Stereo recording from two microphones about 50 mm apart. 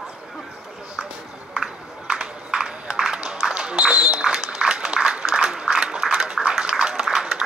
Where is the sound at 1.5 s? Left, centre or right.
Centre.